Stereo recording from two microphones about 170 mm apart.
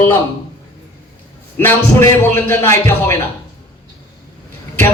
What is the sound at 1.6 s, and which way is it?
Speech, 15° left (ahead or behind).